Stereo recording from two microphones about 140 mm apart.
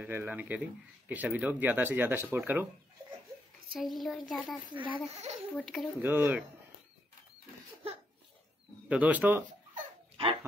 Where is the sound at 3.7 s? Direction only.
Centre (ahead or behind).